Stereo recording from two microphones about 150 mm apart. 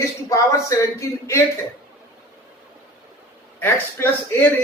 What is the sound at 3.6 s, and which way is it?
Speech, 15° left (ahead or behind).